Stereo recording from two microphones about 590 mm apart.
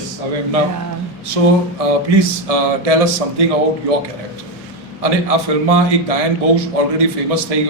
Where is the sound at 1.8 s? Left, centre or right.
Right.